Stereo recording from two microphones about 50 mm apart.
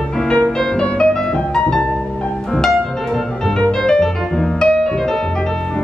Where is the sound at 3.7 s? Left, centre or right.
Centre.